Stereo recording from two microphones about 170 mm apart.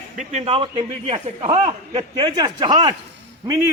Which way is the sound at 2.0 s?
25° right (ahead or behind).